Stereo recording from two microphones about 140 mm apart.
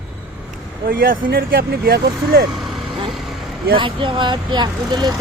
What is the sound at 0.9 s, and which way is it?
Speech, 90° right.